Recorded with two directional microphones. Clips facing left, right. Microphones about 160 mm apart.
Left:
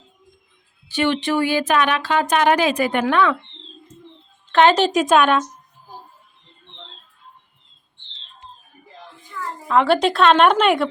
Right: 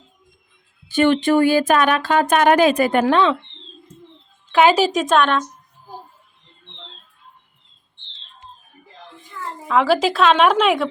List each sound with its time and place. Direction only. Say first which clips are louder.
0.9 s speech: right 5 dB; 50° right (ahead or behind); by 3.3 s 30° right (ahead or behind)
4.5 s a woman's voice: even; 5° right (ahead or behind)
9.6 s a woman's voice: even; centre (ahead or behind)